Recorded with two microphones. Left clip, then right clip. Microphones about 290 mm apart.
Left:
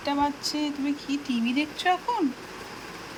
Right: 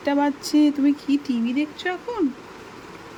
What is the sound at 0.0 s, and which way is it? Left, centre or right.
Speech, centre.